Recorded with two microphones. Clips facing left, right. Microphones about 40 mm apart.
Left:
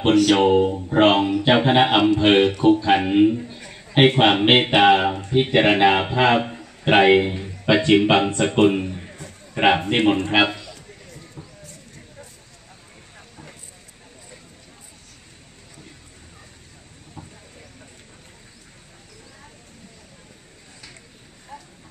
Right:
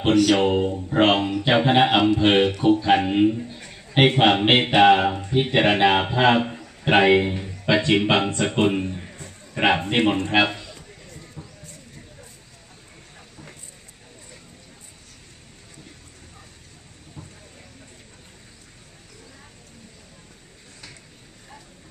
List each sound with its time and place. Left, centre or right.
0.1 s speech: centre
3.5 s a sound: centre
4.4 s speech: centre
6.9 s speech: centre
7.2 s speech: centre
7.6 s speech: centre
7.9 s a man's voice: centre
11.1 s clip-clop: centre